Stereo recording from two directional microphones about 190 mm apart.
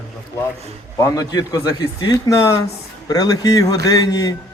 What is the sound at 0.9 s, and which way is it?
Speech, 15° left (ahead or behind).